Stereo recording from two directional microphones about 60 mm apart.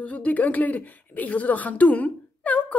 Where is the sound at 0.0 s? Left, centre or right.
Left.